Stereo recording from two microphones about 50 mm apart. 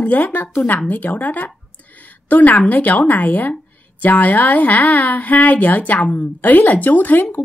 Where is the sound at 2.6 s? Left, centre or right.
Left.